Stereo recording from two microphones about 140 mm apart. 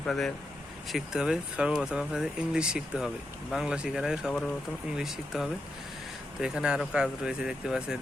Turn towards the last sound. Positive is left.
turn(degrees=-5)  # may be behind; listen again after turning